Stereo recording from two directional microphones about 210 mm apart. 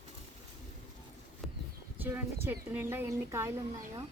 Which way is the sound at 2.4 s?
10° right (ahead or behind).